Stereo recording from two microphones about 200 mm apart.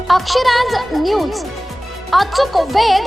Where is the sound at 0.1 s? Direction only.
Centre (ahead or behind).